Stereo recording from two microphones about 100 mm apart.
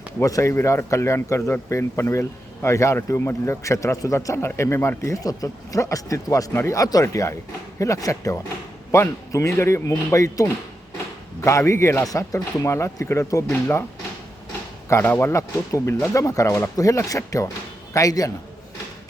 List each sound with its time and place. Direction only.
0.2 s speech: 30° left (ahead or behind)
6.5 s speech: 25° left (ahead or behind)
6.7 s a man's voice: 40° left (ahead or behind)
14.8 s speech: 25° left (ahead or behind)